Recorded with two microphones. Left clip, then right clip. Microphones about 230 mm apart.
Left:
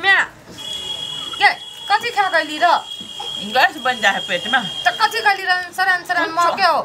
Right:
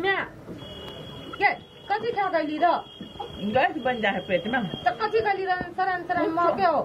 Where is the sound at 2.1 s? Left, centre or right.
Left.